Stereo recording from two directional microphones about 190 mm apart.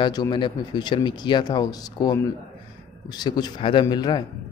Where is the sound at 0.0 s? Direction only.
25° left (ahead or behind).